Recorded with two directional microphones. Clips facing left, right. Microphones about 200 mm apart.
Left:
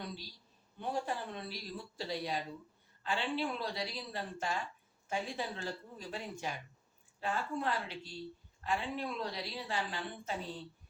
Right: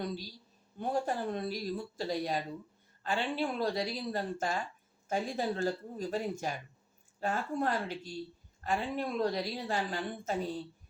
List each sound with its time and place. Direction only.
0.0 s a woman's voice: 45° right (ahead or behind)